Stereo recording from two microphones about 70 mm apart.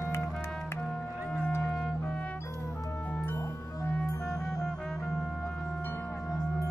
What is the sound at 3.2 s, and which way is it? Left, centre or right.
Music, left.